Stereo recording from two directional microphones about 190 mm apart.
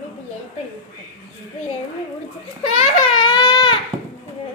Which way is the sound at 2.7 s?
25° left (ahead or behind).